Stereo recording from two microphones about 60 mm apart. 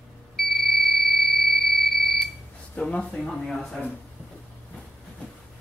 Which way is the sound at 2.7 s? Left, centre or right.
Centre.